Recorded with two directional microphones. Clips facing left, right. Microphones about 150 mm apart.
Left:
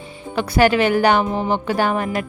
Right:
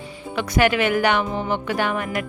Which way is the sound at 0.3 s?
35° left (ahead or behind).